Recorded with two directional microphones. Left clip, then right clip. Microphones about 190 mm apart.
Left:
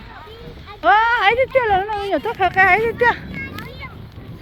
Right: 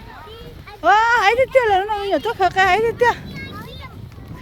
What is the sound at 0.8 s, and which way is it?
Speech, 15° right (ahead or behind).